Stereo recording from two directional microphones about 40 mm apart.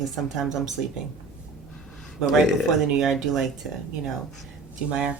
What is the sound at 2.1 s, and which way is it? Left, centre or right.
Speech, centre.